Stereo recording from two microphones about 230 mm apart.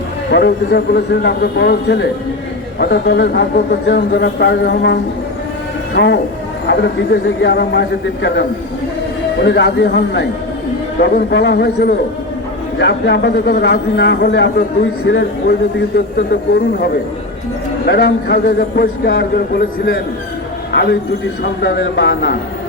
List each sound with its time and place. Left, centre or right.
0.3 s speech: left
21.6 s speech: left